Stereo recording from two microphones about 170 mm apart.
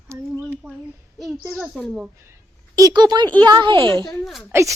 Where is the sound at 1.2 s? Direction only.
Centre (ahead or behind).